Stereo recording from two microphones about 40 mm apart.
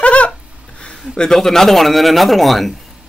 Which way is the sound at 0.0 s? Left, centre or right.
Left.